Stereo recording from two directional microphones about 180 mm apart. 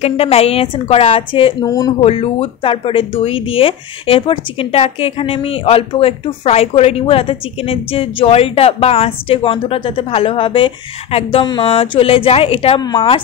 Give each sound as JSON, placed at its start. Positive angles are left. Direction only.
{"t": 0.0, "sound": "speech", "side_deg": 35}
{"t": 1.7, "sound": "speech", "side_deg": 20}
{"t": 2.0, "sound": "speech", "side_deg": 30}